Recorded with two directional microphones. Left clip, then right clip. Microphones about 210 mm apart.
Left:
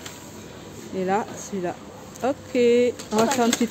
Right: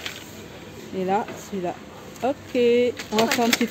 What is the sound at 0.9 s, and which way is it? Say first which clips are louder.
Speech: even; 5° right (ahead or behind).